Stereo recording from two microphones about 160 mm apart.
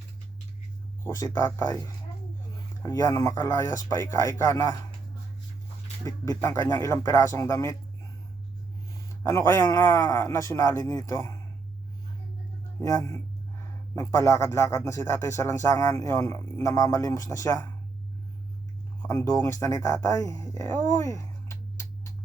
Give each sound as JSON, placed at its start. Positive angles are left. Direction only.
{"t": 1.0, "sound": "speech", "side_deg": 20}
{"t": 3.0, "sound": "speech", "side_deg": 20}
{"t": 6.1, "sound": "speech", "side_deg": 20}
{"t": 9.2, "sound": "speech", "side_deg": 15}
{"t": 12.8, "sound": "speech", "side_deg": 20}
{"t": 19.0, "sound": "speech", "side_deg": 20}